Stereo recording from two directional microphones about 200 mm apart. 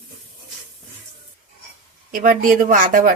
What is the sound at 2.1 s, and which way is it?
Speech, 45° right (ahead or behind).